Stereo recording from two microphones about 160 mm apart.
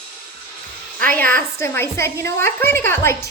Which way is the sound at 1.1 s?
10° left (ahead or behind).